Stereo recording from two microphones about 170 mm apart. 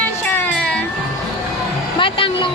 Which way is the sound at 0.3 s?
10° left (ahead or behind).